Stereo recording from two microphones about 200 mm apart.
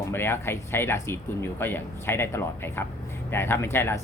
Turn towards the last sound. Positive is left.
turn(degrees=10)  # may be behind; listen again after turning